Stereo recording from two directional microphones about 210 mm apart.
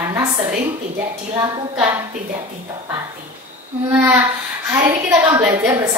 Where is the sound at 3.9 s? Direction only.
10° right (ahead or behind).